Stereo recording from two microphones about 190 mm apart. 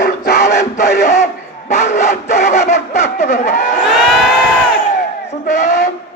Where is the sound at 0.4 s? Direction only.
40° left (ahead or behind).